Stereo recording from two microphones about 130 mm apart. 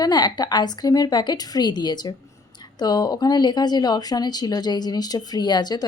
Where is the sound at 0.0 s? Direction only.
30° left (ahead or behind).